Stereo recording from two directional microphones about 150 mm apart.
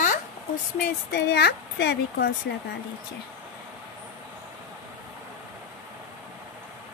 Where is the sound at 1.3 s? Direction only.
90° left.